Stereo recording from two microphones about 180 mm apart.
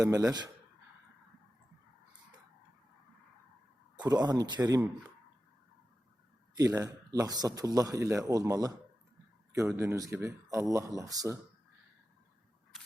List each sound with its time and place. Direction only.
0.0 s speech: 20° right (ahead or behind)
4.0 s speech: 20° right (ahead or behind)
6.6 s speech: 15° right (ahead or behind)
9.7 s speech: 15° right (ahead or behind)